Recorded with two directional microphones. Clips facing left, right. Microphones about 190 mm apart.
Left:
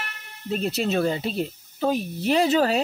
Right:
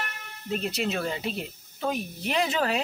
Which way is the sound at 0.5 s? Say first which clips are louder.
Left 5 dB; 40° left (ahead or behind).